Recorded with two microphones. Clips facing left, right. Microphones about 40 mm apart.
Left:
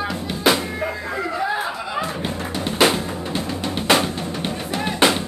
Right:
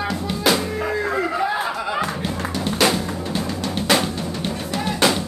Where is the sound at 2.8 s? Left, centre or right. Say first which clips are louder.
Left 2 dB; left.